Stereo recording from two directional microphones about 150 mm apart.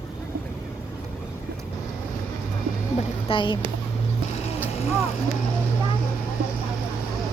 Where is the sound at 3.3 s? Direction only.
35° left (ahead or behind).